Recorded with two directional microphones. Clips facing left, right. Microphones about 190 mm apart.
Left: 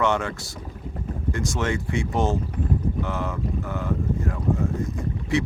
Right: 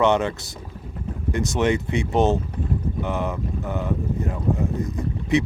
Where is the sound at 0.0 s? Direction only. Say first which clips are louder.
Right 4 dB; 20° right (ahead or behind).